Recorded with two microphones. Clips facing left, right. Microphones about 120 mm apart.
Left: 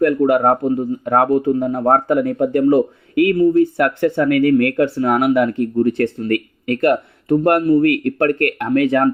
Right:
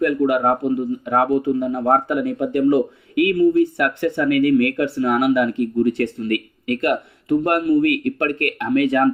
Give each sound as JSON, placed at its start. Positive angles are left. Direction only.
{"t": 0.0, "sound": "speech", "side_deg": 35}